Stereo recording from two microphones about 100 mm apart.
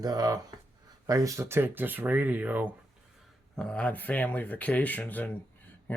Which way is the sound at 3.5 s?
10° left (ahead or behind).